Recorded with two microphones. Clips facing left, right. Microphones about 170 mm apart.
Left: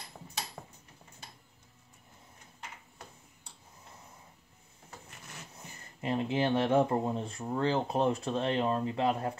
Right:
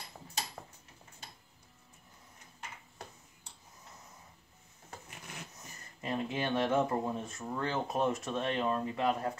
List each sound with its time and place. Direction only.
5.5 s speech: 30° left (ahead or behind)